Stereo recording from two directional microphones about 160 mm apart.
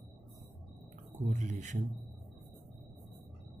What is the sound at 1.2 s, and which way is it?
Speech, 50° right (ahead or behind).